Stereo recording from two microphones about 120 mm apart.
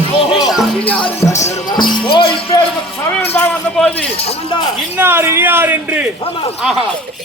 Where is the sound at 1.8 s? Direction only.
45° left (ahead or behind).